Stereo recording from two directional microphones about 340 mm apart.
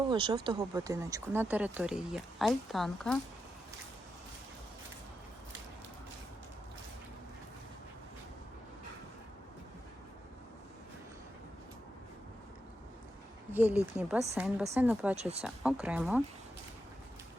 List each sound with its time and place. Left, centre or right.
0.1 s speech: centre
13.5 s speech: centre
15.1 s speech: centre
15.4 s speech: centre